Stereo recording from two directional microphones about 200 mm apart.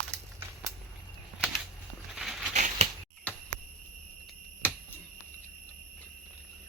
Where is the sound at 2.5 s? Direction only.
35° right (ahead or behind).